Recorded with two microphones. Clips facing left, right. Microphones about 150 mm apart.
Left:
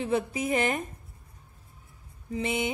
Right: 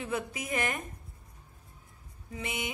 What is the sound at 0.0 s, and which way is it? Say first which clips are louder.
Speech: left 7 dB; 30° left (ahead or behind).